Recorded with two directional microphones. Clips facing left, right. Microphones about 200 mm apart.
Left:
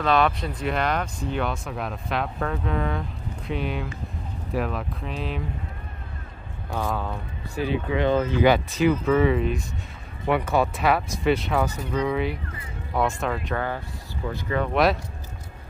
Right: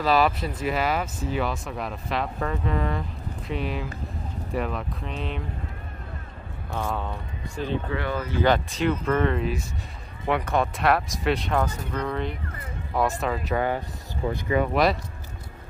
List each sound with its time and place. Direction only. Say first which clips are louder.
0.0 s speech: even; 5° right (ahead or behind)
6.8 s speech: left 2 dB; centre (ahead or behind)
8.0 s speech: left 7 dB; 20° left (ahead or behind); by 13.4 s centre (ahead or behind)
13.6 s speech: right 3 dB; 15° right (ahead or behind)
14.7 s speech: left 4 dB; centre (ahead or behind)